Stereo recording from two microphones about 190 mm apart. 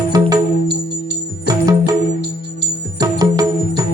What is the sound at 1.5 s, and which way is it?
Music, 20° right (ahead or behind).